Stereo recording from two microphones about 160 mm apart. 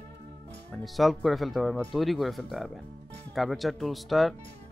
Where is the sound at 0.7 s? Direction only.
Centre (ahead or behind).